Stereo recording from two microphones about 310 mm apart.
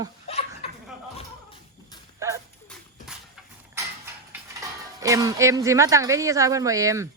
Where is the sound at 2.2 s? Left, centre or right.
Centre.